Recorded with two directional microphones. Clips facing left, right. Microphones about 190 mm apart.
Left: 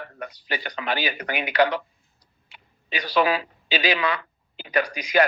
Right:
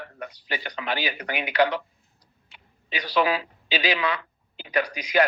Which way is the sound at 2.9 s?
45° left (ahead or behind).